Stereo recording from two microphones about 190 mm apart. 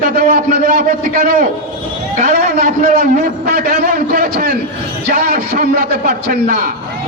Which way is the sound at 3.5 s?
55° right (ahead or behind).